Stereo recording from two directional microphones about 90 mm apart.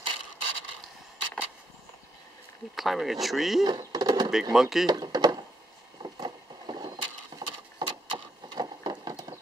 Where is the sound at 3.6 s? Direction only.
50° right (ahead or behind).